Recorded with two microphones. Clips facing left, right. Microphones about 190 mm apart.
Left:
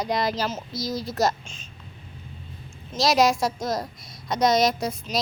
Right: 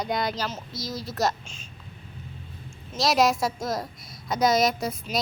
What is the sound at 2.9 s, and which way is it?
A child's voice, centre (ahead or behind).